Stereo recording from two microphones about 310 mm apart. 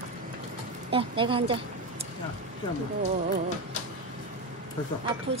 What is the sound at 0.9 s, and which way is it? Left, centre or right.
Speech, centre.